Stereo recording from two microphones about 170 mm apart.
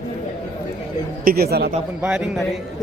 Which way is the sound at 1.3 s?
65° right (ahead or behind).